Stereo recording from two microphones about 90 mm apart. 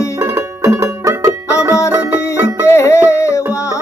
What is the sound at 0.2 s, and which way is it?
Music, 30° right (ahead or behind).